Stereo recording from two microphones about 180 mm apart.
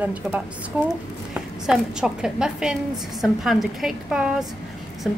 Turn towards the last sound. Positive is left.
turn(degrees=0)  # may be behind; listen again after turning